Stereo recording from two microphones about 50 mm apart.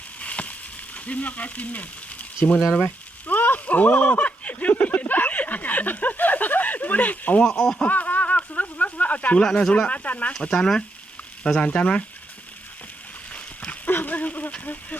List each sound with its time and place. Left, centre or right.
0.2 s a sound: left
0.9 s frying: left
4.7 s a sound: left
7.4 s speech: centre
7.8 s a sound: left
9.4 s speech: centre
10.3 s speech: centre
13.3 s dog: left
14.6 s speech: left